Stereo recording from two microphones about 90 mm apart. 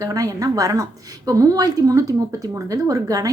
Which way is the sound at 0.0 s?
40° right (ahead or behind).